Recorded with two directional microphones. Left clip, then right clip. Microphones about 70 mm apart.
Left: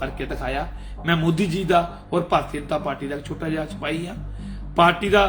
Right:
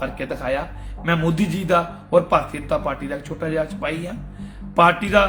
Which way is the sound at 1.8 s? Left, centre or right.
Right.